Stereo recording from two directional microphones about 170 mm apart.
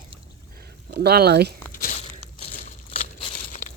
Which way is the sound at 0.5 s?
60° right (ahead or behind).